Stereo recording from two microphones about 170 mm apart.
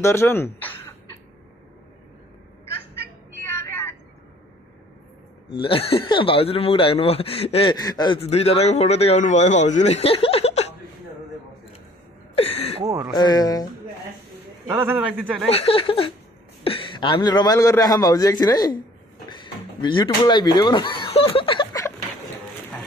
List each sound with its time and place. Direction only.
0.0 s speech: 15° left (ahead or behind)
3.3 s vehicle: 15° left (ahead or behind)
5.6 s a man's voice: 35° left (ahead or behind)
7.7 s a man's voice: 25° left (ahead or behind)
8.2 s a man's voice: 35° left (ahead or behind)
12.4 s a sound: 35° left (ahead or behind)
12.8 s speech: 20° right (ahead or behind)
13.1 s a man's voice: 25° left (ahead or behind)
14.7 s a man's voice: 15° right (ahead or behind)
15.5 s a man's voice: 35° left (ahead or behind)